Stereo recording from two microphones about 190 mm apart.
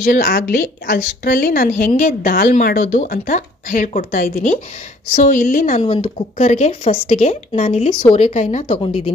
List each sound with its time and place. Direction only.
0.0 s a woman's voice: 50° left (ahead or behind); by 8.3 s 25° left (ahead or behind)
8.3 s speech: 40° left (ahead or behind)